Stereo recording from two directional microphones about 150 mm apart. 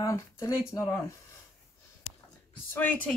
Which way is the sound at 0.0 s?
20° left (ahead or behind).